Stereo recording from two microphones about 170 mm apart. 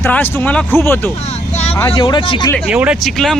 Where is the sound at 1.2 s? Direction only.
40° left (ahead or behind).